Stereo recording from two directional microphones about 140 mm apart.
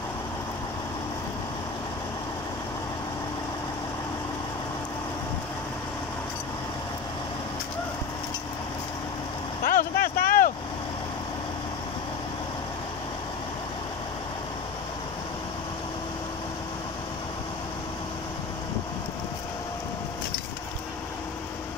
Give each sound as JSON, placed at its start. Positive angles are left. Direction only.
{"t": 9.7, "sound": "vehicle", "side_deg": 90}